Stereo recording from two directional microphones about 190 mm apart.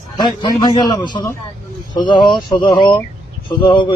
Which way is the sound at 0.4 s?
20° left (ahead or behind).